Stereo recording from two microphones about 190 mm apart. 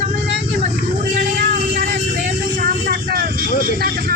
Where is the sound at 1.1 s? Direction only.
45° right (ahead or behind).